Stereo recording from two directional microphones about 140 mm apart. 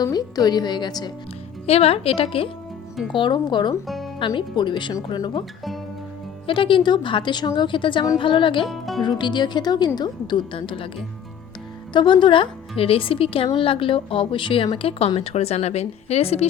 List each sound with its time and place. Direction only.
0.0 s a woman's voice: 25° left (ahead or behind)
1.6 s speech: 45° left (ahead or behind)
3.8 s music: centre (ahead or behind)
4.4 s speech: 35° left (ahead or behind)
6.5 s speech: 35° left (ahead or behind)
8.6 s speech: centre (ahead or behind)
9.0 s speech: 35° left (ahead or behind)
11.9 s speech: 35° left (ahead or behind)